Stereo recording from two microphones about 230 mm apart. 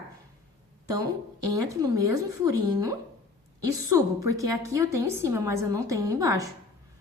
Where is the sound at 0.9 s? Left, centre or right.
Centre.